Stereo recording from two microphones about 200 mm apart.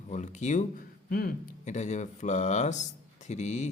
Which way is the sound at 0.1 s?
35° left (ahead or behind).